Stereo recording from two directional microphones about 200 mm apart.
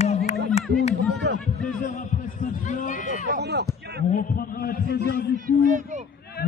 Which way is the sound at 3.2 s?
55° right (ahead or behind).